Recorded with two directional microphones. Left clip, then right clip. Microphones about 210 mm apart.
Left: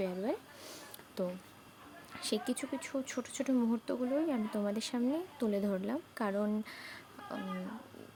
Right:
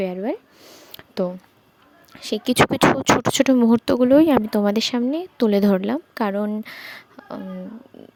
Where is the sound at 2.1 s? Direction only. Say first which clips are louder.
Right 18 dB; 35° right (ahead or behind).